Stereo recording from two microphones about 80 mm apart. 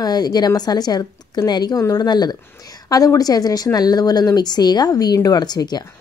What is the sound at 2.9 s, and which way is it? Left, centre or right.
A woman's voice, left.